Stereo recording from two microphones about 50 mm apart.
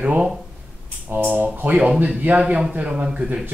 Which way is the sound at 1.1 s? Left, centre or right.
Right.